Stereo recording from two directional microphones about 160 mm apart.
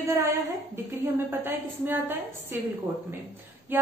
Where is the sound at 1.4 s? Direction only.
10° right (ahead or behind).